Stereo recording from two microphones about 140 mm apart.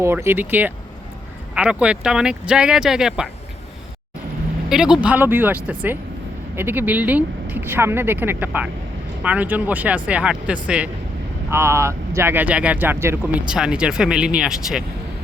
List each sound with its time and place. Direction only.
0.0 s speech: 20° right (ahead or behind)
4.7 s speech: 5° right (ahead or behind)
11.5 s speech: 20° right (ahead or behind); by 14.8 s 5° right (ahead or behind)